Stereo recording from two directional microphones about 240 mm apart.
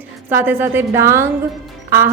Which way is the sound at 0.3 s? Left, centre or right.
Centre.